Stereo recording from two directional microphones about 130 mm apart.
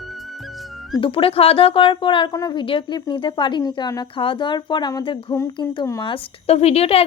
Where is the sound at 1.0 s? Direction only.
45° left (ahead or behind); by 5.4 s 30° left (ahead or behind).